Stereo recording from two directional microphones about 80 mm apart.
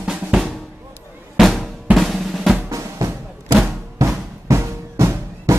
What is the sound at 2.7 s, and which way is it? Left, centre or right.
Drum, right.